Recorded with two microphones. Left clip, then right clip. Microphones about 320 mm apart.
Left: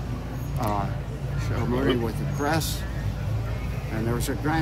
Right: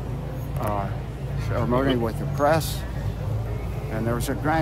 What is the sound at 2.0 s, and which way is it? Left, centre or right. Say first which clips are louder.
Speech: right 5 dB; centre.